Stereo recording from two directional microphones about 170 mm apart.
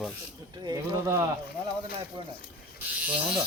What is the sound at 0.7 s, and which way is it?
Speech, 20° right (ahead or behind).